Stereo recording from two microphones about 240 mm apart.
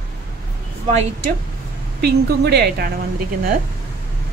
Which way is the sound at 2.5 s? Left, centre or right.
Right.